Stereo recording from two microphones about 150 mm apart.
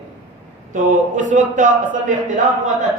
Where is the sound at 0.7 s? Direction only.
55° right (ahead or behind).